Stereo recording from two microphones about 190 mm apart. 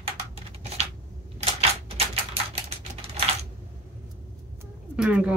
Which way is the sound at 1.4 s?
30° right (ahead or behind).